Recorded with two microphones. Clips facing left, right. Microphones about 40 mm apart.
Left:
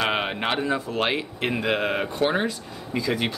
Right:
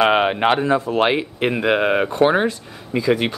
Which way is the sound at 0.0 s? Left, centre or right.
Centre.